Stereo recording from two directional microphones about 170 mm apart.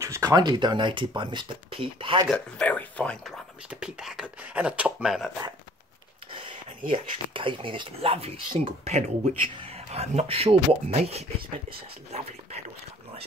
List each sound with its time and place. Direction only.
0.0 s speech: 20° right (ahead or behind)
2.2 s speech: 5° left (ahead or behind)
3.8 s speech: 5° right (ahead or behind)
6.9 s speech: 30° right (ahead or behind)